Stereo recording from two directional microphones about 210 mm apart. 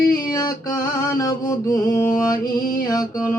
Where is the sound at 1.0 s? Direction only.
15° left (ahead or behind).